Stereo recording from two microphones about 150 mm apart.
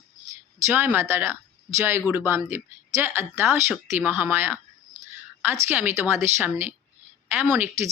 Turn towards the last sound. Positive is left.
turn(degrees=-15)  # may be behind; listen again after turning